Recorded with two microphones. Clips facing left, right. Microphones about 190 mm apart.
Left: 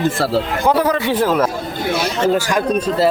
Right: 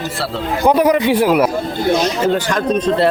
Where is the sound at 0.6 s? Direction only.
15° right (ahead or behind).